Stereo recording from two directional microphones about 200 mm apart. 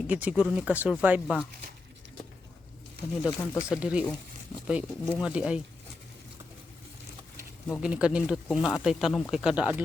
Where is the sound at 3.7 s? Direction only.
5° right (ahead or behind).